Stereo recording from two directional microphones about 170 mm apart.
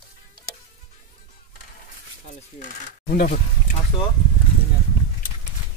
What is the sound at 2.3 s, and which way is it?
Speech, 50° left (ahead or behind).